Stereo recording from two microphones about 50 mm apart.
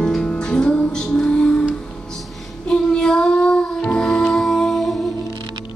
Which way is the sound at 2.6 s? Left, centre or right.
Centre.